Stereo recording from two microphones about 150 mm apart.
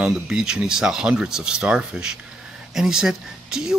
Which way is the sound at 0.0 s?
5° right (ahead or behind).